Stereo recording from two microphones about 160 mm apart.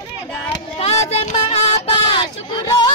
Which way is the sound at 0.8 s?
40° left (ahead or behind).